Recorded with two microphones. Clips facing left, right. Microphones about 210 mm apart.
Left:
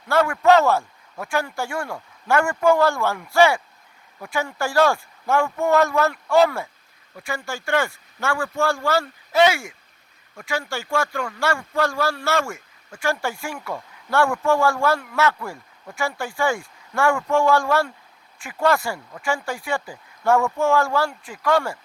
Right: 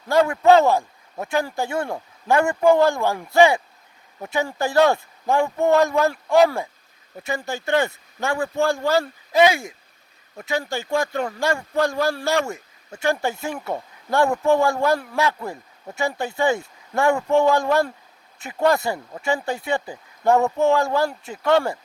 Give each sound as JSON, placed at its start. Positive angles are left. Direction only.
{"t": 0.1, "sound": "a man's voice", "side_deg": -15}
{"t": 13.6, "sound": "speech", "side_deg": -35}
{"t": 14.4, "sound": "a man's voice", "side_deg": -20}